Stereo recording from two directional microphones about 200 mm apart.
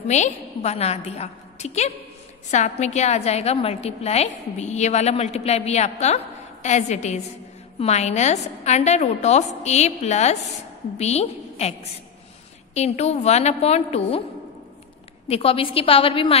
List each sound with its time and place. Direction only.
0.1 s a woman's voice: 35° left (ahead or behind)
12.7 s a woman's voice: 35° left (ahead or behind)
15.2 s a woman's voice: 30° left (ahead or behind)